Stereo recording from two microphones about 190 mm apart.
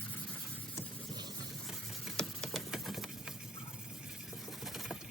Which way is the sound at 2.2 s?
Centre (ahead or behind).